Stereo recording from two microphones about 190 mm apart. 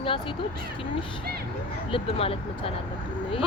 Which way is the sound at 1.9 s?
30° left (ahead or behind).